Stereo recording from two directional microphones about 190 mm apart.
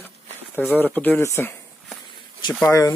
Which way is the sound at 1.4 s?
10° left (ahead or behind).